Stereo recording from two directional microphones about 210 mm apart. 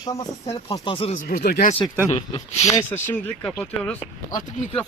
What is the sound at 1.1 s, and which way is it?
Speech, 45° left (ahead or behind).